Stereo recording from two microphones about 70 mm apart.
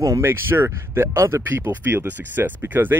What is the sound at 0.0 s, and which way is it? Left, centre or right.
Speech, right.